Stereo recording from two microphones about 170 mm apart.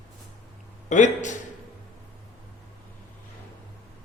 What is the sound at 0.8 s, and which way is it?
Speech, 45° left (ahead or behind).